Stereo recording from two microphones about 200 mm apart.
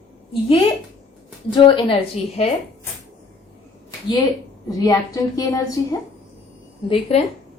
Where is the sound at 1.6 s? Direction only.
25° left (ahead or behind).